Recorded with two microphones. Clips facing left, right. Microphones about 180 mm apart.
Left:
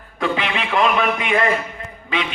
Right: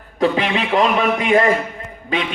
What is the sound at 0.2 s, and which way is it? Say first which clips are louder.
A man's voice: right 5 dB; 40° right (ahead or behind).